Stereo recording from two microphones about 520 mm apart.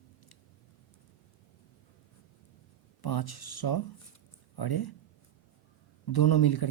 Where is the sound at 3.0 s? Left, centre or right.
Left.